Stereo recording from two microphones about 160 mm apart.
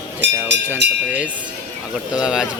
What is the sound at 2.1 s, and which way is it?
Speech, 5° right (ahead or behind).